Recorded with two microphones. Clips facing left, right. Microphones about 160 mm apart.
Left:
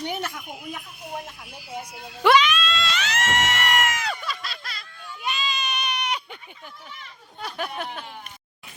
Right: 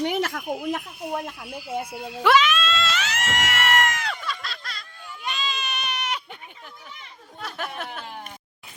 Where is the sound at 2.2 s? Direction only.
5° right (ahead or behind).